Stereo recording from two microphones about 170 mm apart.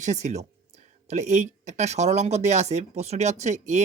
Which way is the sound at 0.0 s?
45° right (ahead or behind).